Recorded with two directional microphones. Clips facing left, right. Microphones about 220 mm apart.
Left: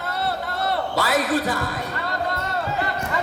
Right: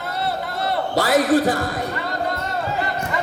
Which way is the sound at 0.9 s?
45° right (ahead or behind).